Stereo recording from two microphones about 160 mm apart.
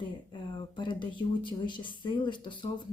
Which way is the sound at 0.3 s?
30° left (ahead or behind).